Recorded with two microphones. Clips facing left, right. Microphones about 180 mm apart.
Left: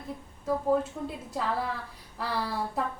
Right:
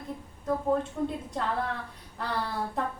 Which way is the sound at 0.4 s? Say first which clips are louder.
Left 1 dB; 5° left (ahead or behind).